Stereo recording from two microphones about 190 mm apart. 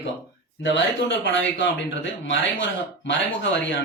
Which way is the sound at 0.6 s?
75° left (ahead or behind).